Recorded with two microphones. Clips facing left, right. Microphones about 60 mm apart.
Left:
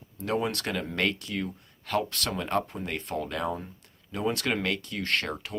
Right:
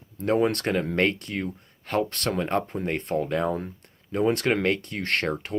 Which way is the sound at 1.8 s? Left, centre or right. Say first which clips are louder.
Right 3 dB; right.